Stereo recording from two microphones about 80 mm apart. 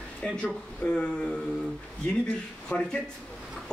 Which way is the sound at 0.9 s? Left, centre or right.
Centre.